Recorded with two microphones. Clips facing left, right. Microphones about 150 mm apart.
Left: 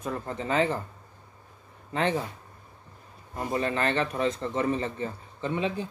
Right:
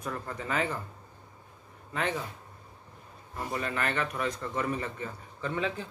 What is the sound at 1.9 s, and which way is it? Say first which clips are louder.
Speech: left 5 dB; 25° left (ahead or behind).